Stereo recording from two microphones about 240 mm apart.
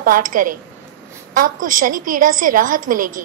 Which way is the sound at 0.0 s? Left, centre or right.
Right.